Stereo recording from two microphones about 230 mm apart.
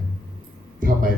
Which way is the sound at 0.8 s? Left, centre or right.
Right.